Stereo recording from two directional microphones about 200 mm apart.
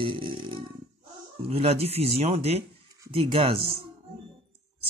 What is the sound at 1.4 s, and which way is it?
Speech, 30° right (ahead or behind).